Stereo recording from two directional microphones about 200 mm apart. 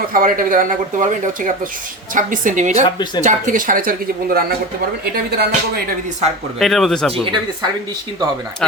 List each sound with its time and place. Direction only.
0.1 s speech: 40° right (ahead or behind)
6.6 s speech: centre (ahead or behind)